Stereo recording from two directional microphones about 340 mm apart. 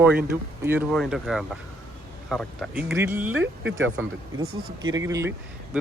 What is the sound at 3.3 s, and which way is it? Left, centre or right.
Speech, right.